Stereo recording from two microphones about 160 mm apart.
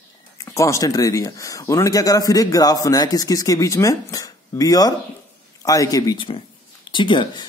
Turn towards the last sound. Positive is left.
turn(degrees=30)  # may be behind; listen again after turning